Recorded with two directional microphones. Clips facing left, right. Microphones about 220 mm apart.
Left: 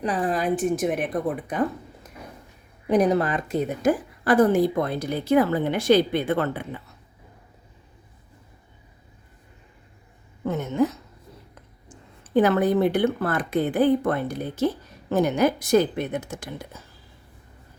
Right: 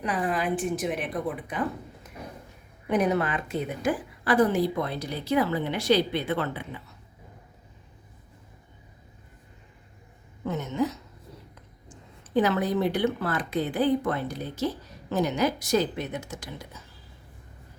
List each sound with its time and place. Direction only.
0.0 s a woman's voice: 35° left (ahead or behind)
2.8 s a woman's voice: 35° left (ahead or behind)
10.4 s a woman's voice: 50° left (ahead or behind)
12.3 s a woman's voice: 55° left (ahead or behind)